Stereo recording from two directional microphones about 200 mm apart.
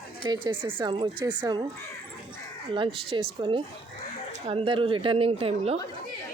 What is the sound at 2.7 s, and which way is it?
A woman's voice, 25° right (ahead or behind).